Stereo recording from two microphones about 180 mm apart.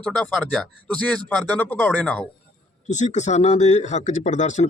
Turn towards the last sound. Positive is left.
turn(degrees=40)  # may be behind; listen again after turning